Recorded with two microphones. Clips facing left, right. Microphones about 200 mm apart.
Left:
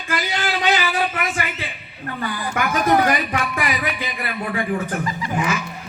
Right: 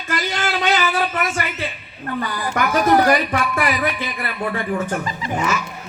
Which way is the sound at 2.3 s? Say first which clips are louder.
Right 3 dB; 35° right (ahead or behind).